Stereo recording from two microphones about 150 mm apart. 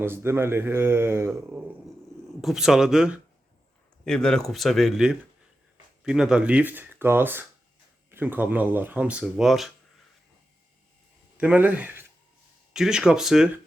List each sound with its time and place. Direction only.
0.0 s speech: 15° right (ahead or behind)
2.4 s speech: centre (ahead or behind)
11.3 s speech: 10° right (ahead or behind)